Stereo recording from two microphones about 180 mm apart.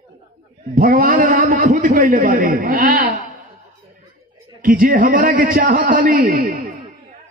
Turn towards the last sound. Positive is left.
turn(degrees=-50)  # may be behind; listen again after turning